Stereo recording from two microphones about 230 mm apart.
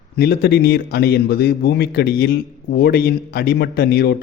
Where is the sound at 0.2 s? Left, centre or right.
Left.